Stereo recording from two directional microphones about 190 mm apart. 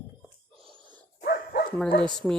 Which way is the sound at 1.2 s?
55° left (ahead or behind).